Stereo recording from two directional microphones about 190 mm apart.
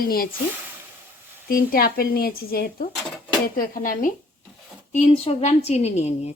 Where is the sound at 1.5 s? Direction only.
50° left (ahead or behind).